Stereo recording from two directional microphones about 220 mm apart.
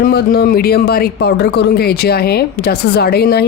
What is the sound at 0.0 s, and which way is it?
Speech, 45° left (ahead or behind).